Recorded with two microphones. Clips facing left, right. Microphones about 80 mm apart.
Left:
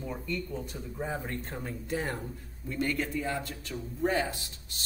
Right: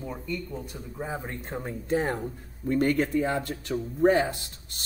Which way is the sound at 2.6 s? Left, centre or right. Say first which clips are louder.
Right 8 dB; right.